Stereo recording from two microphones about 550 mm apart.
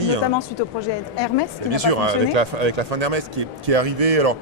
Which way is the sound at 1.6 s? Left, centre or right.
Right.